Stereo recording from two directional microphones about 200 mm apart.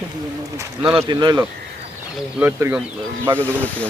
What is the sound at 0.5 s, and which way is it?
Speech, 25° right (ahead or behind).